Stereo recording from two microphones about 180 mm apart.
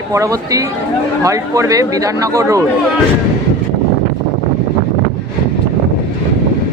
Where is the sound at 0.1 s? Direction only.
20° right (ahead or behind).